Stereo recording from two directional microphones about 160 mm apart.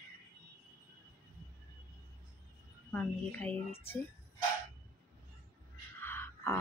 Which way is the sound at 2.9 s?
10° left (ahead or behind).